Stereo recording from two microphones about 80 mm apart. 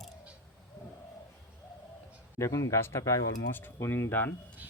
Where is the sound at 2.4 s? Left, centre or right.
Left.